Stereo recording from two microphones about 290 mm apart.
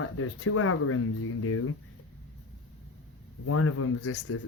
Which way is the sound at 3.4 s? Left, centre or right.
Left.